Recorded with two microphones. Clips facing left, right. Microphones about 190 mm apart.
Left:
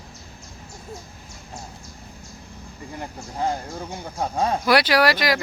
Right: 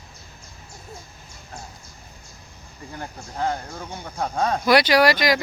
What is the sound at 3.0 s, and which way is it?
Speech, 10° left (ahead or behind).